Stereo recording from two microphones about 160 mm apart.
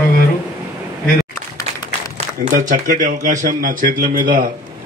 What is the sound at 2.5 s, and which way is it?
Speech, 50° right (ahead or behind).